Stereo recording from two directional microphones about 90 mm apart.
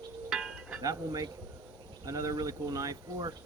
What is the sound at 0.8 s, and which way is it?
Speech, 40° right (ahead or behind).